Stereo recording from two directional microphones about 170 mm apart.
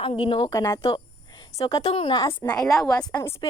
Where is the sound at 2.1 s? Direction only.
25° left (ahead or behind).